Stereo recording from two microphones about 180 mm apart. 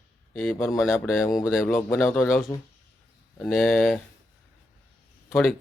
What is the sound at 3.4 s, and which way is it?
Speech, centre (ahead or behind).